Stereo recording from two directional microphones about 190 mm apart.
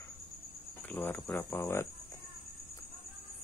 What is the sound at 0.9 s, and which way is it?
Speech, 10° left (ahead or behind).